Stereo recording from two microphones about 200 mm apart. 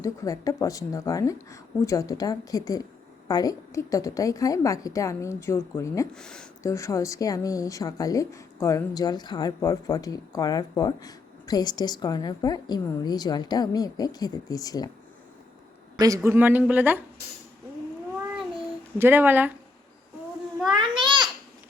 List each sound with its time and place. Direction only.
0.0 s speech: 15° left (ahead or behind)
6.1 s speech: 5° left (ahead or behind)
6.6 s speech: 15° left (ahead or behind)
16.0 s a man's voice: 15° right (ahead or behind)
18.9 s a man's voice: 10° right (ahead or behind)
20.7 s babbling: 25° right (ahead or behind)